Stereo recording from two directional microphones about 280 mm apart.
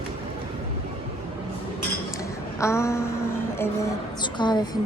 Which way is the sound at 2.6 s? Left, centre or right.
Centre.